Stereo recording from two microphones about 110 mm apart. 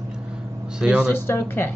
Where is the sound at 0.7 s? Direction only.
10° right (ahead or behind).